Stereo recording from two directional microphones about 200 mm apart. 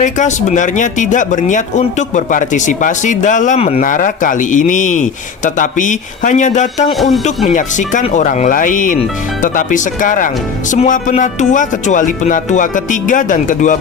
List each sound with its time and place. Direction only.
0.0 s speech: 35° left (ahead or behind)
6.9 s speech: centre (ahead or behind)
7.4 s speech: 40° left (ahead or behind)